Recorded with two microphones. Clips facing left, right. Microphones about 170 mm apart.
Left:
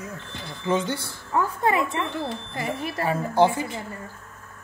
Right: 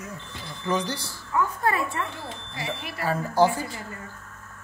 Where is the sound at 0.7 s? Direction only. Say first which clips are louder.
Left 3 dB; 25° left (ahead or behind).